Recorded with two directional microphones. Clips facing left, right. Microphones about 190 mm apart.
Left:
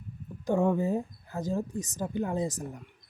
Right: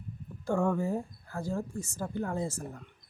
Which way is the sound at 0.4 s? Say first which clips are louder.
Left 3 dB; 20° left (ahead or behind).